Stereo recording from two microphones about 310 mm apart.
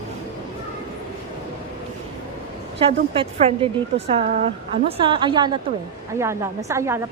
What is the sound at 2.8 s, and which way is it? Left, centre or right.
A woman's voice, centre.